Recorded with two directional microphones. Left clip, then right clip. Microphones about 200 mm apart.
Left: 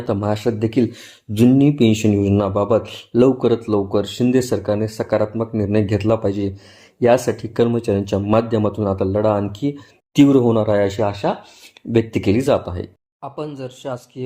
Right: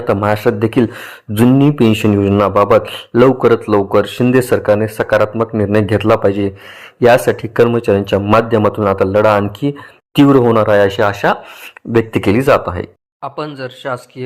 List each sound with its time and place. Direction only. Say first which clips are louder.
0.1 s speech: right 7 dB; 10° right (ahead or behind)
10.3 s speech: right 5 dB; 35° right (ahead or behind)
10.6 s speech: right 7 dB; 10° right (ahead or behind)